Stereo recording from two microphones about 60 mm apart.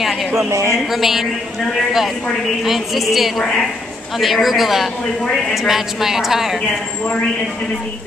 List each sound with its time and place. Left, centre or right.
0.3 s speech: right
0.9 s a woman's voice: centre